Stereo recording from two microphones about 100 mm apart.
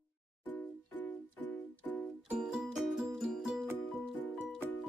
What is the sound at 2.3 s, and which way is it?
Music, 5° right (ahead or behind).